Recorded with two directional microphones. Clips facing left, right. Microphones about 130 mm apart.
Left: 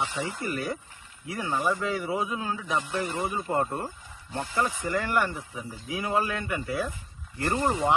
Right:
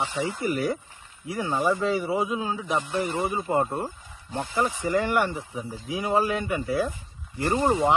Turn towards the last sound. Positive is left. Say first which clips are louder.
# right 3 dB
turn(degrees=-20)  # may be behind; listen again after turning